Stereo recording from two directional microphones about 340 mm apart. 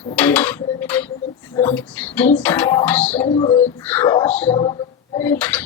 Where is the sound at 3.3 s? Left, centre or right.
Centre.